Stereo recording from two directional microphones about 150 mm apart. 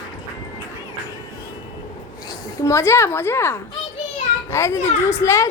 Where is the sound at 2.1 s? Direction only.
25° left (ahead or behind).